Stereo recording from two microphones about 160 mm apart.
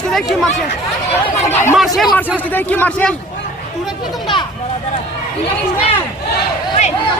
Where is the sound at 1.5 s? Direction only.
15° left (ahead or behind).